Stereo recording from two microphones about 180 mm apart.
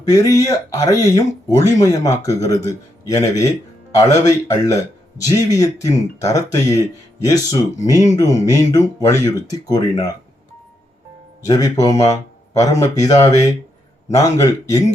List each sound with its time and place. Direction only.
0.1 s speech: 20° left (ahead or behind)
11.4 s speech: 20° left (ahead or behind)